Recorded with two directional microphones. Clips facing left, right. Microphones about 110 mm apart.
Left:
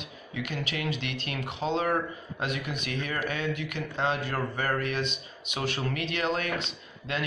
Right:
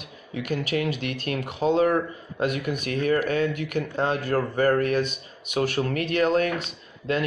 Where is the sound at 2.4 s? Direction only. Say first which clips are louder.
Right 7 dB; 45° right (ahead or behind).